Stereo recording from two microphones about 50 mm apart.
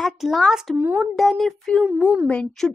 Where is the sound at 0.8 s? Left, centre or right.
Right.